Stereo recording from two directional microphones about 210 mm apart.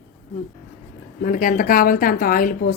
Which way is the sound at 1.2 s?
40° left (ahead or behind).